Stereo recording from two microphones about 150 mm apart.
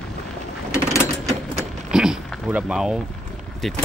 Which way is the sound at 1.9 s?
5° right (ahead or behind).